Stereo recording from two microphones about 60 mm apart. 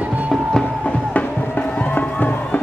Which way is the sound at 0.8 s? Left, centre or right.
Left.